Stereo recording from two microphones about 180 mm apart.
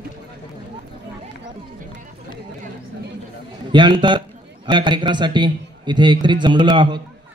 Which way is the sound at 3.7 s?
25° right (ahead or behind).